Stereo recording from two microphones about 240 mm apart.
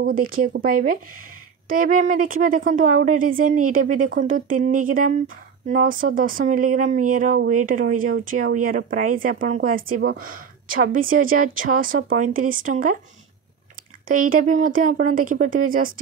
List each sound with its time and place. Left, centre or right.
0.0 s speech: right
14.0 s speech: right